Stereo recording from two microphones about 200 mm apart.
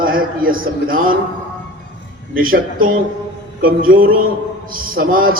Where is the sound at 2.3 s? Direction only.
45° right (ahead or behind).